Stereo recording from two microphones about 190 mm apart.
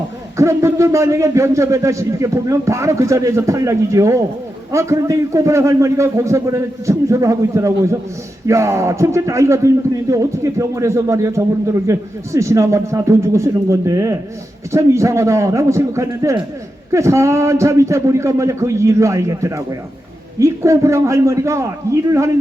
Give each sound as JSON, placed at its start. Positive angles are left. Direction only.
{"t": 0.3, "sound": "a man's voice", "side_deg": -15}